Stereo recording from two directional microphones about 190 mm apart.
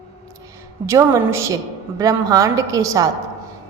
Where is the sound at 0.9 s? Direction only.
15° right (ahead or behind).